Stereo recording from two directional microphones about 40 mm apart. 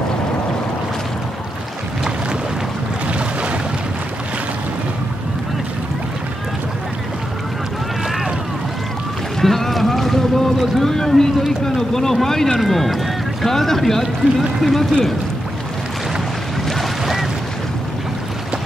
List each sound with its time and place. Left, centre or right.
3.1 s boat: right
9.4 s boat: centre
11.6 s speech: centre
17.0 s a sound: centre